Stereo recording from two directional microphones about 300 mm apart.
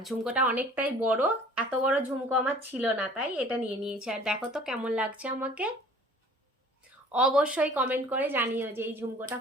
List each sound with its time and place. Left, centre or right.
0.0 s speech: centre
7.1 s speech: centre